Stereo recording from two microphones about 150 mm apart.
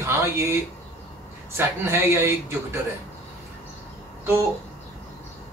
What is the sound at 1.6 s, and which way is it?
Speech, 15° right (ahead or behind).